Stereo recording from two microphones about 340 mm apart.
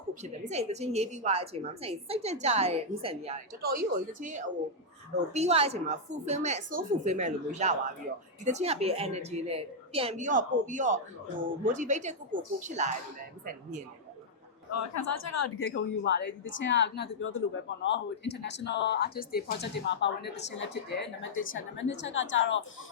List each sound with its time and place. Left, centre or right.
0.1 s a woman's voice: centre
14.7 s speech: left